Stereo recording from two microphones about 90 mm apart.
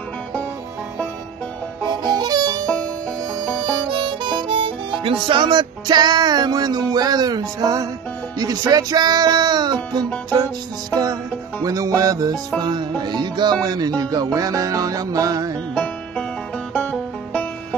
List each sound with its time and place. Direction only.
1.9 s music: 50° right (ahead or behind)
3.3 s harmonica: 55° right (ahead or behind)
8.4 s music: 45° right (ahead or behind)
10.9 s music: 45° right (ahead or behind)
15.7 s music: 15° left (ahead or behind)